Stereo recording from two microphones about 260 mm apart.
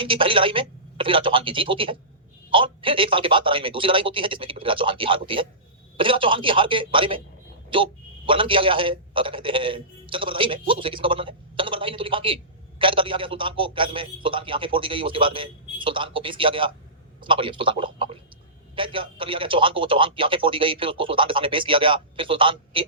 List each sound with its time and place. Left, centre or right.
0.0 s a man's voice: centre